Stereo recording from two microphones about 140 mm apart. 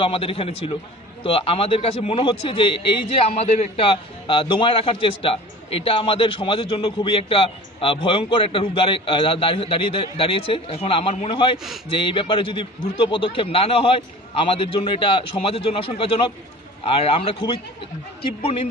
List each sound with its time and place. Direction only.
0.0 s a man's voice: 40° left (ahead or behind)